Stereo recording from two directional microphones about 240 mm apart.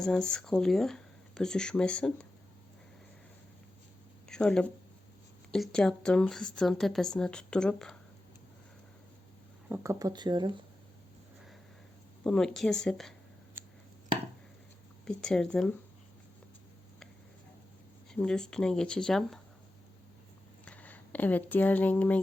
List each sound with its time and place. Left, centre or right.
0.0 s speech: centre
4.3 s speech: centre
9.6 s speech: centre
12.2 s speech: centre
15.0 s speech: centre
18.1 s speech: centre
20.7 s speech: centre